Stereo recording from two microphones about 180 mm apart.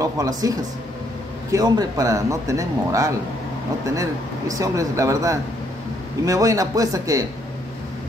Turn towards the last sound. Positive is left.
turn(degrees=-20)  # may be behind; listen again after turning